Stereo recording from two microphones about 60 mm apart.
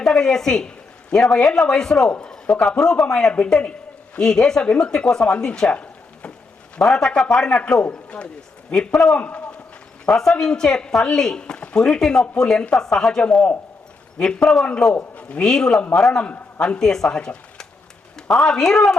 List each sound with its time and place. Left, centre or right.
0.0 s a woman's voice: centre
5.7 s frying: left
6.7 s speech: centre
8.7 s speech: centre
9.1 s a man's voice: centre
10.1 s speech: centre
14.6 s a man's voice: centre